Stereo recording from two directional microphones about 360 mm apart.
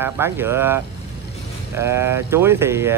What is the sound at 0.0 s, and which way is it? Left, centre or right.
Speech, centre.